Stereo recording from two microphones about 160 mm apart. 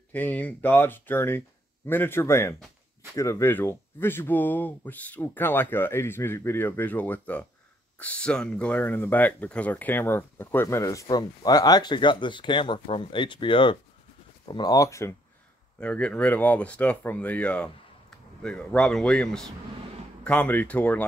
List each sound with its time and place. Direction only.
0.1 s speech: 10° left (ahead or behind)
15.8 s speech: 5° left (ahead or behind)